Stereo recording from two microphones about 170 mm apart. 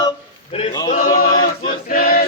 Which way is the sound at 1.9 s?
55° left (ahead or behind).